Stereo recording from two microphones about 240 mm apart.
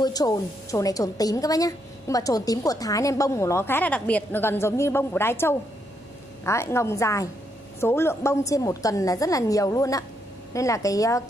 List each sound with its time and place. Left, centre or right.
0.0 s a woman's voice: centre